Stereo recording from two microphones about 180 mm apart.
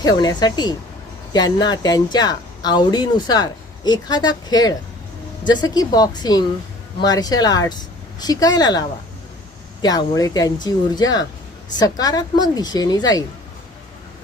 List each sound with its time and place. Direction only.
0.0 s speech: 20° left (ahead or behind)
9.8 s speech: 20° left (ahead or behind)